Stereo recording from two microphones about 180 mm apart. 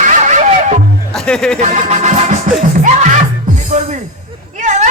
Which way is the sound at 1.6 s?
40° right (ahead or behind).